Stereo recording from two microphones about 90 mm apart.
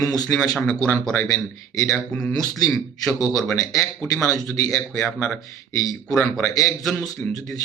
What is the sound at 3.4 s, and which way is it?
Speech, 35° left (ahead or behind).